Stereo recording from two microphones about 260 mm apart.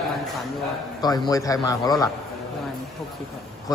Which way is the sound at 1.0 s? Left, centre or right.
Centre.